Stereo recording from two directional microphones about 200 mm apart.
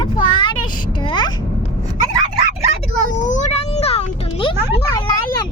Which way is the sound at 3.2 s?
35° left (ahead or behind).